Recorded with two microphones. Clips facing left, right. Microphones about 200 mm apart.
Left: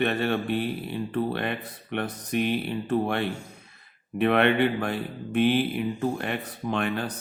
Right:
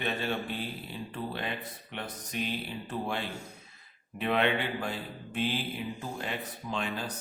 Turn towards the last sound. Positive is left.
turn(degrees=60)  # may be behind; listen again after turning